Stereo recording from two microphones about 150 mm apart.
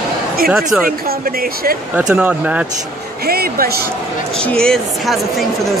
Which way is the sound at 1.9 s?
10° right (ahead or behind).